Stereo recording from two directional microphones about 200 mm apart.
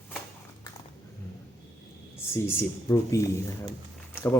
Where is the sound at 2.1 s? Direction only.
10° left (ahead or behind).